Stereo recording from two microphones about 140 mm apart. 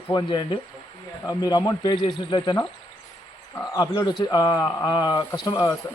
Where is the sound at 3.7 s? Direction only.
25° left (ahead or behind).